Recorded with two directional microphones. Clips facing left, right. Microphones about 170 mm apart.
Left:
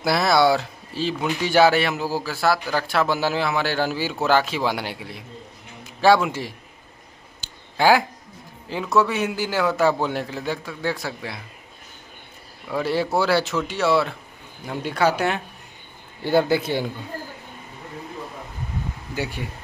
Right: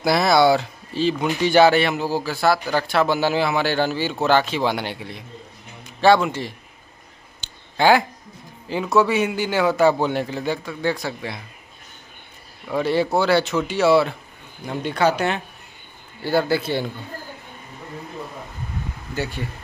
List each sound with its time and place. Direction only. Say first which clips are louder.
0.0 s speech: right 2 dB; centre (ahead or behind)
7.7 s speech: right 1 dB; 5° left (ahead or behind)
12.6 s speech: right 3 dB; centre (ahead or behind)
16.3 s speech: left 1 dB; 20° left (ahead or behind)
19.1 s speech: right 1 dB; 10° left (ahead or behind)